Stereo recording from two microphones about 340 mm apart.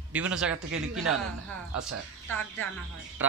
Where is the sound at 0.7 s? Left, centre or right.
Right.